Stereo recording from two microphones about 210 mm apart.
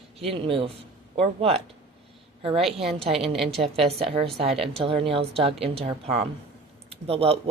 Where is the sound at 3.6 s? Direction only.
30° right (ahead or behind).